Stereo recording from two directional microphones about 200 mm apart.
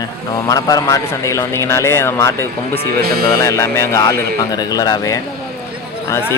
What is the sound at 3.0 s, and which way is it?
Speech, 50° right (ahead or behind).